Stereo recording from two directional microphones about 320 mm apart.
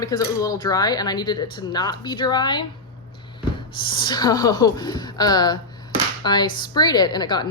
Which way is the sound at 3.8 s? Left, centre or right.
Centre.